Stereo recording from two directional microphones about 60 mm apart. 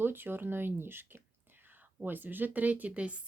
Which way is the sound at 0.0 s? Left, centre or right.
Right.